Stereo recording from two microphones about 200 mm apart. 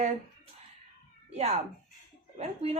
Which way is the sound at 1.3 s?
30° right (ahead or behind).